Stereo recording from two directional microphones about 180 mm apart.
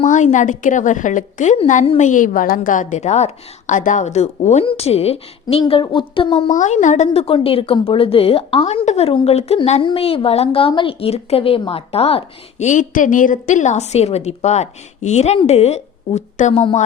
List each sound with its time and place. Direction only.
0.0 s a woman's voice: 45° left (ahead or behind)
6.5 s speech: 40° left (ahead or behind)